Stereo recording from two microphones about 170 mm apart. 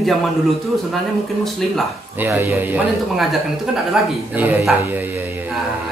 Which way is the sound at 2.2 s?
15° right (ahead or behind).